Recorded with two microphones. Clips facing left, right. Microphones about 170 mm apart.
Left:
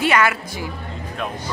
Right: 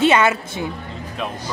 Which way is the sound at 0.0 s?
25° right (ahead or behind).